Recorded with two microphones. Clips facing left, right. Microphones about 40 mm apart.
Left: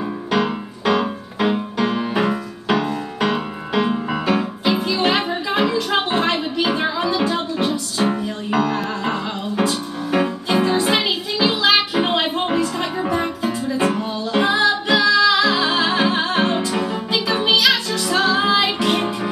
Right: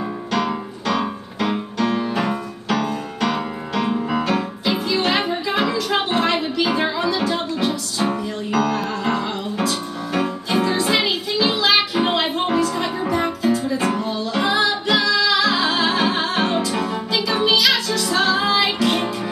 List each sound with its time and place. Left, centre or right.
0.3 s music: centre
13.0 s music: centre
16.3 s music: centre; by 19.1 s left